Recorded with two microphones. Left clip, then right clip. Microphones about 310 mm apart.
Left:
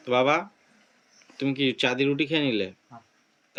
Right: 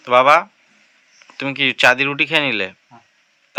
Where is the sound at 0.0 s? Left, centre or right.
Centre.